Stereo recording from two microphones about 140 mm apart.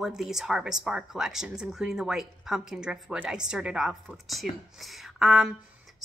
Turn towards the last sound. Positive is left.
turn(degrees=-5)  # may be behind; listen again after turning